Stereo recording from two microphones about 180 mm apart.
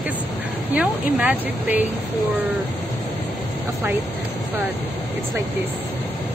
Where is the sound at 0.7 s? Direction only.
10° right (ahead or behind).